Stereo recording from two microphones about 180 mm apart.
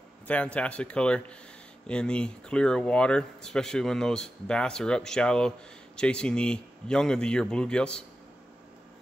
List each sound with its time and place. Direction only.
0.3 s speech: 5° left (ahead or behind)